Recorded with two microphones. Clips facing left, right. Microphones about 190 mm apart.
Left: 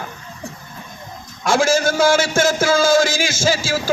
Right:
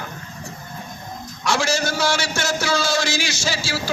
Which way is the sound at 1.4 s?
50° left (ahead or behind).